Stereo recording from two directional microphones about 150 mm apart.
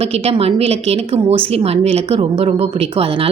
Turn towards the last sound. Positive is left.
turn(degrees=-40)  # may be behind; listen again after turning